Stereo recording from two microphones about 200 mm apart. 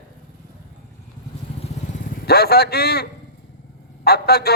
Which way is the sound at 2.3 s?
50° left (ahead or behind).